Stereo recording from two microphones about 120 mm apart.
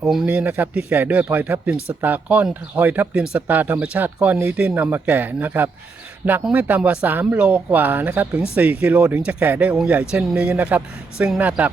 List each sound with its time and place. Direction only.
0.0 s speech: centre (ahead or behind)
0.3 s speech: 15° right (ahead or behind)